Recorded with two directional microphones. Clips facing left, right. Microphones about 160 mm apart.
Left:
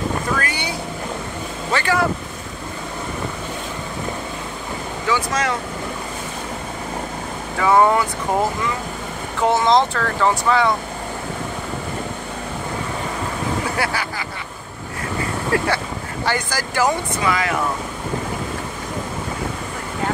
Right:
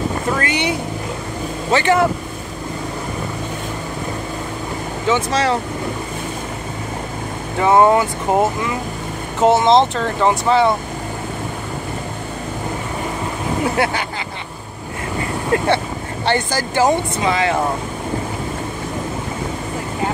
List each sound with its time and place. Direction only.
1.7 s speech: 20° right (ahead or behind)
5.0 s speech: 25° right (ahead or behind)
7.5 s speech: 25° right (ahead or behind)
13.8 s speech: 25° right (ahead or behind)
15.5 s speech: 25° right (ahead or behind)